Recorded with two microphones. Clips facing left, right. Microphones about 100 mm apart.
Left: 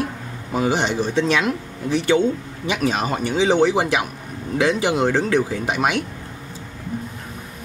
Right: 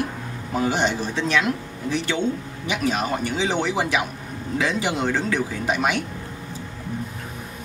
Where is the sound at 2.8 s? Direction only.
20° left (ahead or behind).